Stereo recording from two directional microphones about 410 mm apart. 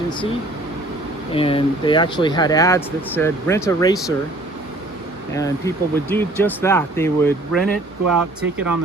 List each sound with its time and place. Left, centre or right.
1.3 s speech: centre
5.3 s speech: centre
8.0 s speech: right